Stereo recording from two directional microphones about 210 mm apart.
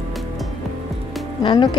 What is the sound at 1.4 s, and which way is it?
Speech, 20° left (ahead or behind).